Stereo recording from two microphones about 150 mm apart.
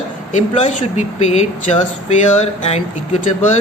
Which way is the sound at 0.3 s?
50° left (ahead or behind).